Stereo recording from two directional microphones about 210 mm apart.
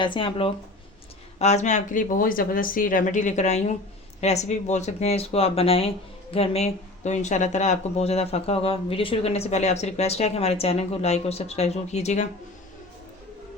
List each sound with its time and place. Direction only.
0.0 s speech: 25° left (ahead or behind)